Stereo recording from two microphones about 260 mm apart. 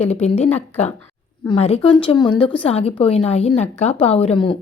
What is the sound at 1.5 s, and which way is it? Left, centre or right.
A woman's voice, left.